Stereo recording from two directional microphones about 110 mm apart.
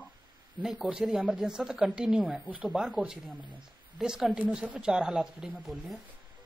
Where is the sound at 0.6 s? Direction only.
5° right (ahead or behind).